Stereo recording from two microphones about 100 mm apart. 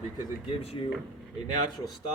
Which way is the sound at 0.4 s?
80° left.